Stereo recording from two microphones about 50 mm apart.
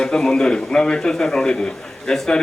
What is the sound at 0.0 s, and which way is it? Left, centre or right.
Speech, centre.